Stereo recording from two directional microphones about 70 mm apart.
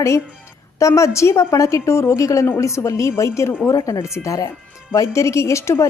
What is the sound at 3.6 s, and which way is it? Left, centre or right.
A woman's voice, left.